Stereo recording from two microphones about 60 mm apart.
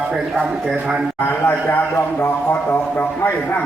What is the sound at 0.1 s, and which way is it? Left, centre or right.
Speech, centre.